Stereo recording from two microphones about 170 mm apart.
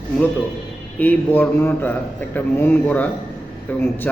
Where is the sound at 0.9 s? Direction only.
10° left (ahead or behind).